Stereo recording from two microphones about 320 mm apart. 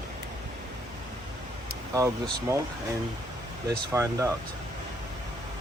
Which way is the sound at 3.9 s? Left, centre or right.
Centre.